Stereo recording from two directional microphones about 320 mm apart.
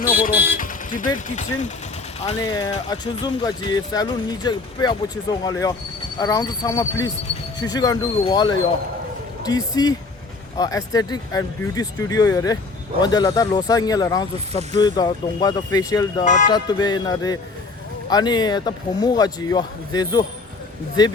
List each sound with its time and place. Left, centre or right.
0.6 s speech: left
2.2 s speech: centre
16.2 s speech: left